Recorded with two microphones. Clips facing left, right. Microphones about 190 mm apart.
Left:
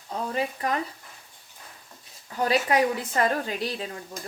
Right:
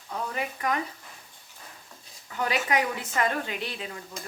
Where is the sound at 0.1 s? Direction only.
30° left (ahead or behind).